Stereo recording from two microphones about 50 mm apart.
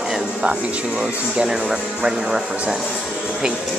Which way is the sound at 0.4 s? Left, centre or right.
Right.